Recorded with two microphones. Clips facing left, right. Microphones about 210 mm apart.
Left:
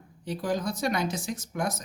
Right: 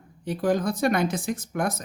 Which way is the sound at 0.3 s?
55° right (ahead or behind).